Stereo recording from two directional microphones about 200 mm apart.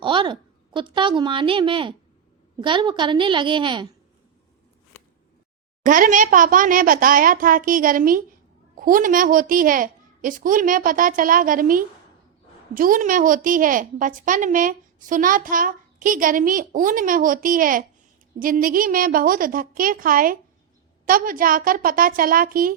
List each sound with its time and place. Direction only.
0.0 s a woman's voice: 25° right (ahead or behind)
5.8 s a woman's voice: 40° right (ahead or behind)